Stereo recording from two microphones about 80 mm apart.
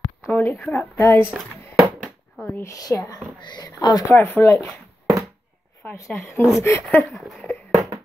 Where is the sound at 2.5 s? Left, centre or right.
Left.